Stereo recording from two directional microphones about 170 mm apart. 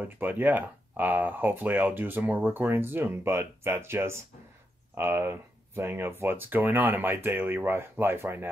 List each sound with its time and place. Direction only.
0.0 s speech: 10° right (ahead or behind)